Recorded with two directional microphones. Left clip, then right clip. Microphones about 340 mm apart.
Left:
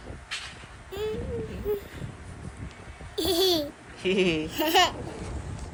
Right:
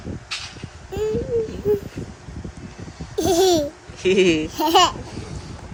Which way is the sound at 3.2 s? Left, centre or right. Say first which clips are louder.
Right 7 dB; centre.